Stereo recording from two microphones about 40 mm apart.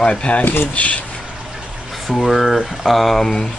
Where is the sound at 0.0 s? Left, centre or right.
Left.